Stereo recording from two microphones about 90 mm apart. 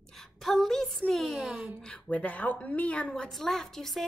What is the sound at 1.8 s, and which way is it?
A woman's voice, 10° left (ahead or behind).